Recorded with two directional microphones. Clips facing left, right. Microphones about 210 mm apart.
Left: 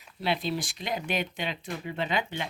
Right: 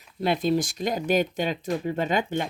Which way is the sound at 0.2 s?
45° right (ahead or behind).